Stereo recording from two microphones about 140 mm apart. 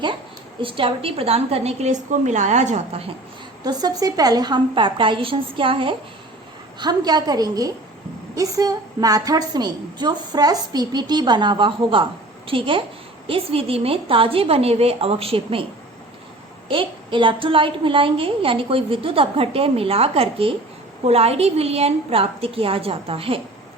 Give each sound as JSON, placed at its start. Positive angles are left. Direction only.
{"t": 0.6, "sound": "a woman's voice", "side_deg": -40}
{"t": 3.6, "sound": "a woman's voice", "side_deg": -30}
{"t": 16.6, "sound": "a woman's voice", "side_deg": -35}